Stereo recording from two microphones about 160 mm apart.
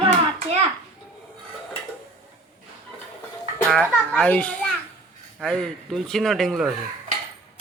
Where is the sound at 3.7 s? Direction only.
5° left (ahead or behind).